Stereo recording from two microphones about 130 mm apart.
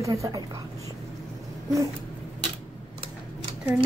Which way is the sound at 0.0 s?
25° right (ahead or behind).